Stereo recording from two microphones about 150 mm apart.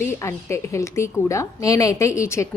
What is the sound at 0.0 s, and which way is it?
A woman's voice, 15° left (ahead or behind).